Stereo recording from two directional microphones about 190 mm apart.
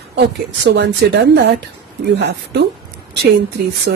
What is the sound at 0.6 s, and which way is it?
Speech, 65° right (ahead or behind).